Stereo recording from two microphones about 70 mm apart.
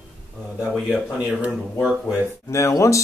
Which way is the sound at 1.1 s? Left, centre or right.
Right.